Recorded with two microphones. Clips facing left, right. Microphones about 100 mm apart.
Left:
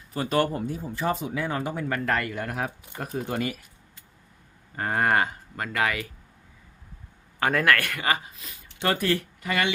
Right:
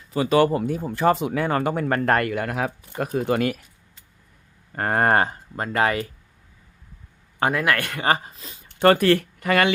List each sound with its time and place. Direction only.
0.1 s speech: 90° right; by 2.3 s 50° right (ahead or behind)
2.3 s speech: 90° right; by 3.6 s 65° right (ahead or behind)
4.7 s speech: 50° right (ahead or behind); by 6.1 s 35° right (ahead or behind)
7.6 s speech: 20° right (ahead or behind)
8.0 s speech: 35° right (ahead or behind)
8.8 s speech: 60° right (ahead or behind)